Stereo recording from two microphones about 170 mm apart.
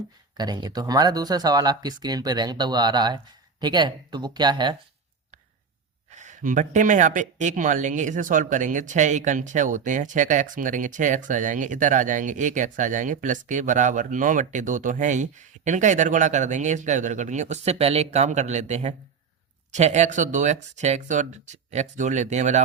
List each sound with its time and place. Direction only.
0.3 s speech: 25° right (ahead or behind)
6.1 s speech: 45° right (ahead or behind)